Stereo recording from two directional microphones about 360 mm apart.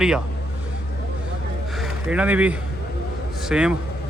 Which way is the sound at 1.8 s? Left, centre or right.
Centre.